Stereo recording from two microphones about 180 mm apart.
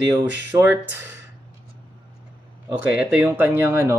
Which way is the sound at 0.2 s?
20° right (ahead or behind).